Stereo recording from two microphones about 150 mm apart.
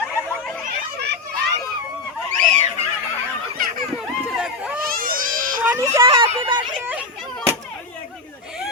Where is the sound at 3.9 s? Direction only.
5° right (ahead or behind).